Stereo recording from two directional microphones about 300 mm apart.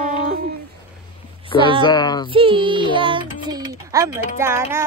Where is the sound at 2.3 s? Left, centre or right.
Centre.